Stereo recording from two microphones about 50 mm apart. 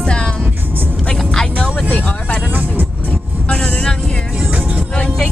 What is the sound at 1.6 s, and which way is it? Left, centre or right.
Vehicle, left.